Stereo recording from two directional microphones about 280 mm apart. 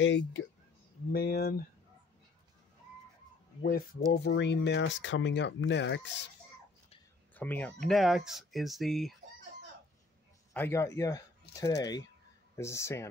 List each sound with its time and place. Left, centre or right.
0.0 s speech: left
3.6 s speech: left
7.3 s speech: centre
10.5 s speech: centre